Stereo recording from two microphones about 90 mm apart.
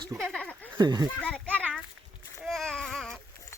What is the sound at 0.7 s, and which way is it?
Speech, 45° right (ahead or behind).